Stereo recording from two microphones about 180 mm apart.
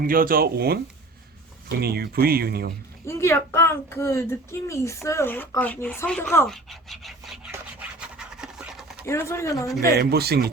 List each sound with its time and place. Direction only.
0.0 s speech: 55° right (ahead or behind)
1.8 s speech: 60° right (ahead or behind)
3.1 s speech: 15° left (ahead or behind); by 7.5 s centre (ahead or behind)
7.5 s a sound: 5° right (ahead or behind)
9.0 s speech: 15° left (ahead or behind)
9.8 s speech: 60° right (ahead or behind)